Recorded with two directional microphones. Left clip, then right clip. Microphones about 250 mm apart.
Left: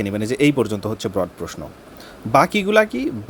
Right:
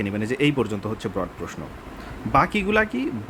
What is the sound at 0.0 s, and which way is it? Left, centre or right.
Speech, centre.